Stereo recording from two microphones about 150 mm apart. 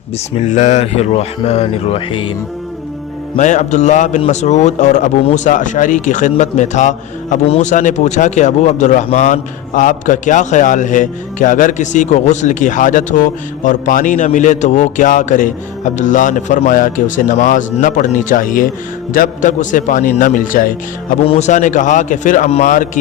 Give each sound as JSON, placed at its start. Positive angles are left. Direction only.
{"t": 0.3, "sound": "speech", "side_deg": 55}
{"t": 3.3, "sound": "a man's voice", "side_deg": 55}
{"t": 21.2, "sound": "a man's voice", "side_deg": 50}